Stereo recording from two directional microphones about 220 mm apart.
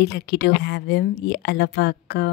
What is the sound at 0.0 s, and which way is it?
A woman's voice, 50° left (ahead or behind).